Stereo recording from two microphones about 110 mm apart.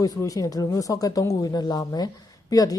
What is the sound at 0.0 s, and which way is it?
A woman's voice, 30° left (ahead or behind).